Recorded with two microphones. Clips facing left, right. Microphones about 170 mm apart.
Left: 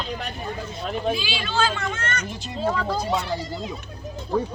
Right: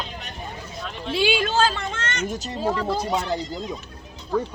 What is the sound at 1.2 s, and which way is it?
Speech, 50° right (ahead or behind).